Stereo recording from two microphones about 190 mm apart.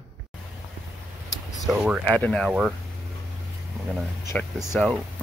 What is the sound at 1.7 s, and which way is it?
Speech, 5° right (ahead or behind).